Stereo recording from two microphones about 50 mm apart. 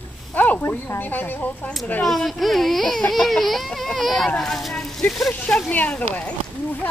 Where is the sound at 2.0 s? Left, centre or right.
Centre.